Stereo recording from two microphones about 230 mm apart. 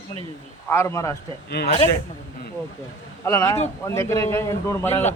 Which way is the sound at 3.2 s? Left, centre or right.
Centre.